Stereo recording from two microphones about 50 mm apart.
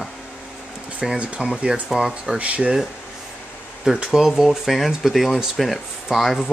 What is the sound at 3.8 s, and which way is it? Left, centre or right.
Speech, centre.